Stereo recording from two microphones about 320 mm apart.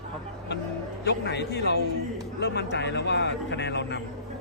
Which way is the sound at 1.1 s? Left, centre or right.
Left.